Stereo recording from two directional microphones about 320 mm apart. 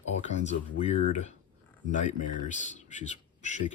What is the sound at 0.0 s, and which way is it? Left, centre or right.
Speech, left.